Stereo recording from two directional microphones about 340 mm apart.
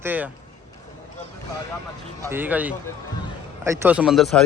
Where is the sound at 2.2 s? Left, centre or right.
Centre.